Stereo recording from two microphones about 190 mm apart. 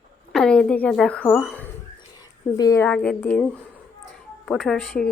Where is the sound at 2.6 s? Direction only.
15° left (ahead or behind).